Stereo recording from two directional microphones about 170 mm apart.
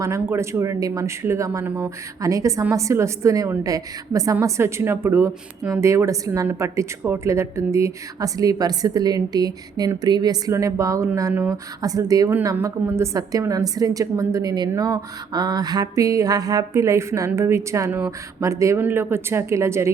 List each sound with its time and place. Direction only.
0.0 s speech: 15° right (ahead or behind)